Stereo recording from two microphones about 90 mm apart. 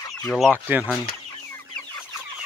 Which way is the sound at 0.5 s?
20° right (ahead or behind).